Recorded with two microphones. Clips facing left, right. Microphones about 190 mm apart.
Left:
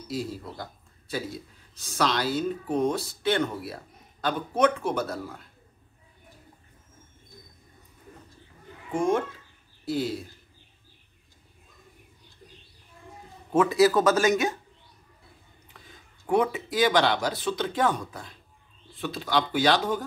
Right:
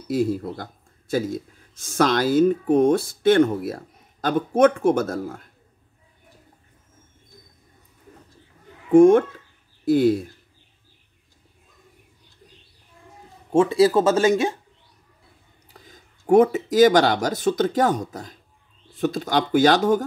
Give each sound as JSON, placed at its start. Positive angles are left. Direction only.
{"t": 0.1, "sound": "speech", "side_deg": -55}
{"t": 8.9, "sound": "a child's voice", "side_deg": -55}
{"t": 13.5, "sound": "speech", "side_deg": -30}
{"t": 15.7, "sound": "speech", "side_deg": -40}